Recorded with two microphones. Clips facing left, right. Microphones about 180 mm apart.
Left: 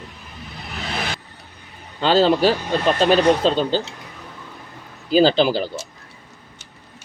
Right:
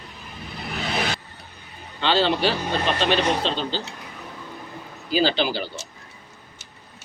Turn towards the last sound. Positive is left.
turn(degrees=45)  # may be behind; listen again after turning